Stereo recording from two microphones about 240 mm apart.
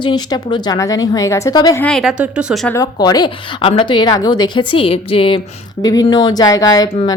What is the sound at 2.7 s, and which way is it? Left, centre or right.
A woman's voice, centre.